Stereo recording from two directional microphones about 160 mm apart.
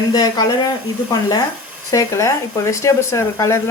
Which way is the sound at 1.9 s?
20° left (ahead or behind).